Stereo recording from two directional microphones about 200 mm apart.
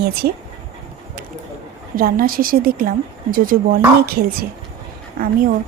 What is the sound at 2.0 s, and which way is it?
A woman's voice, 45° right (ahead or behind).